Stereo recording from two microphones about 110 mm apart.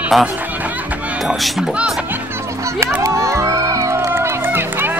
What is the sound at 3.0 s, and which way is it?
Music, 30° right (ahead or behind).